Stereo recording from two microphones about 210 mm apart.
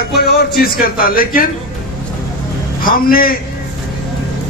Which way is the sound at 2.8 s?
45° left (ahead or behind).